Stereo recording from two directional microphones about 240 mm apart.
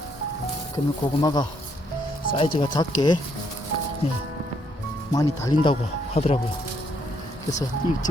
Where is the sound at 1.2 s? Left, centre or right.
Centre.